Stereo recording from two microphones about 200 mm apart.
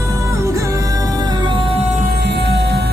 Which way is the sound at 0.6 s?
15° right (ahead or behind).